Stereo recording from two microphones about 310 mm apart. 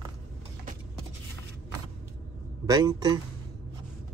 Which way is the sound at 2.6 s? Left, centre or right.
Centre.